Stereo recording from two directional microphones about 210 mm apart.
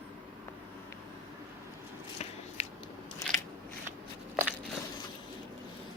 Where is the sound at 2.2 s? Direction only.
30° left (ahead or behind).